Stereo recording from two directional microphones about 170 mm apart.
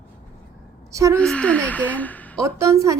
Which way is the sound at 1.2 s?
5° left (ahead or behind).